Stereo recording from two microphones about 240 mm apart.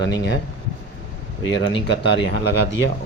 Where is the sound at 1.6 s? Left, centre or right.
Left.